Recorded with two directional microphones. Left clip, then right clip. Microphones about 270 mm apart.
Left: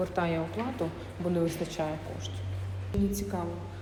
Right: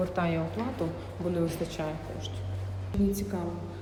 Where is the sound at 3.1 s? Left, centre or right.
Centre.